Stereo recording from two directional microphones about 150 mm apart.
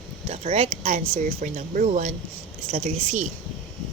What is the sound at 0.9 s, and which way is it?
Speech, 55° right (ahead or behind).